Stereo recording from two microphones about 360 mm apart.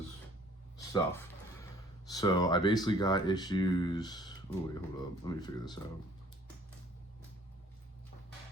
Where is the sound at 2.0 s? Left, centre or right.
Centre.